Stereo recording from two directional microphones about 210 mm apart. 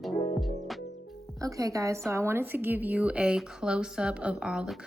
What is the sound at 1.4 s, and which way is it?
A woman's voice, 15° right (ahead or behind).